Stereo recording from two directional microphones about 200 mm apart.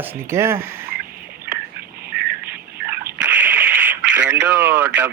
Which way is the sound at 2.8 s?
10° right (ahead or behind).